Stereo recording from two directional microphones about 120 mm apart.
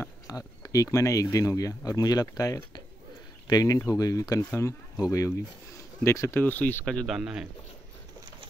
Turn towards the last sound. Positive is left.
turn(degrees=-5)  # may be behind; listen again after turning